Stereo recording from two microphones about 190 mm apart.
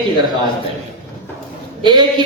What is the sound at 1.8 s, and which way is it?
Speech, 25° right (ahead or behind).